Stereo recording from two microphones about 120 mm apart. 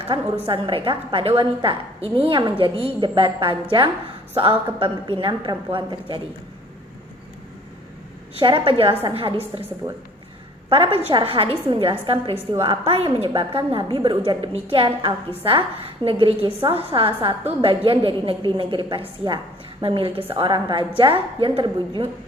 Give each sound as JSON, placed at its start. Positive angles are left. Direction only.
{"t": 0.1, "sound": "a woman's voice", "side_deg": -45}
{"t": 2.0, "sound": "a woman's voice", "side_deg": -50}
{"t": 8.4, "sound": "a woman's voice", "side_deg": -45}
{"t": 10.7, "sound": "a woman's voice", "side_deg": -50}